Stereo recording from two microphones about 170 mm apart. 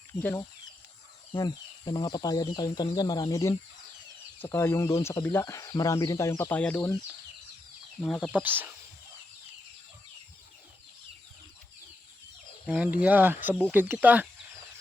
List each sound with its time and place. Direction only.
0.1 s speech: 15° left (ahead or behind)
1.3 s speech: 25° left (ahead or behind); by 6.9 s 10° left (ahead or behind)
8.0 s speech: 5° left (ahead or behind)
8.3 s speech: 10° right (ahead or behind)
12.6 s speech: 5° right (ahead or behind)